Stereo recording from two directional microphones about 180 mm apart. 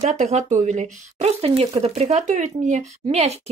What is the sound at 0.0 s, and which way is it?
A woman's voice, 40° right (ahead or behind).